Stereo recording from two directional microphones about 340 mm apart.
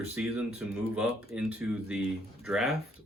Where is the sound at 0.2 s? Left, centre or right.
Centre.